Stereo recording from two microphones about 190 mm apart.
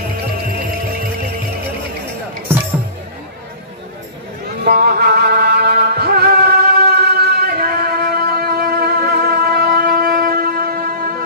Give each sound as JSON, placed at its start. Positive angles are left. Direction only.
{"t": 4.6, "sound": "music", "side_deg": -55}